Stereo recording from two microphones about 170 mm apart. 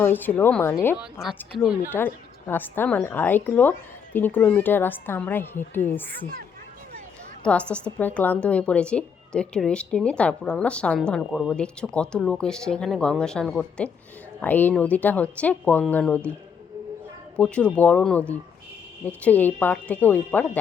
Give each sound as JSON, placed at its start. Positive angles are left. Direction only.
{"t": 0.0, "sound": "a woman's voice", "side_deg": 10}
{"t": 1.5, "sound": "a woman's voice", "side_deg": -5}
{"t": 1.9, "sound": "a woman's voice", "side_deg": 10}
{"t": 7.4, "sound": "a woman's voice", "side_deg": 5}
{"t": 17.3, "sound": "a woman's voice", "side_deg": 5}